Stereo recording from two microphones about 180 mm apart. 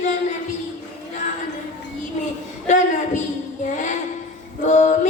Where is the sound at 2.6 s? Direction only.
45° left (ahead or behind).